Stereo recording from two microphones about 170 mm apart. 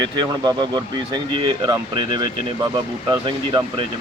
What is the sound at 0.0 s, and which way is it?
Speech, 25° right (ahead or behind).